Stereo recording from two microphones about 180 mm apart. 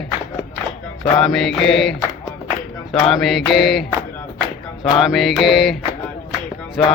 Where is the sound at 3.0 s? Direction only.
Centre (ahead or behind).